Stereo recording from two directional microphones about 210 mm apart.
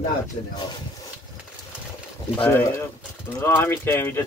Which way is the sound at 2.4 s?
10° left (ahead or behind).